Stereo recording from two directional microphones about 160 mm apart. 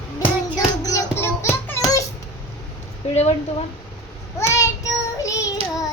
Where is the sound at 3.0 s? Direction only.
40° left (ahead or behind).